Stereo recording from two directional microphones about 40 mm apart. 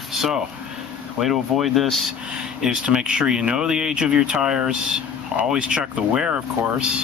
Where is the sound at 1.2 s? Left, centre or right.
Centre.